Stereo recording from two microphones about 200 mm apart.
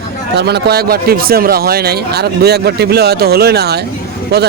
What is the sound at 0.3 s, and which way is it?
Speech, 55° right (ahead or behind).